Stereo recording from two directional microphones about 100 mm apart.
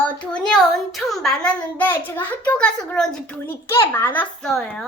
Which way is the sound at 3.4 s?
25° left (ahead or behind).